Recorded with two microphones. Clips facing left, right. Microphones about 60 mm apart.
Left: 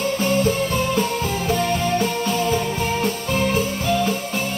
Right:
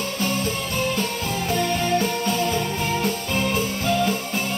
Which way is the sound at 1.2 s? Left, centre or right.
Centre.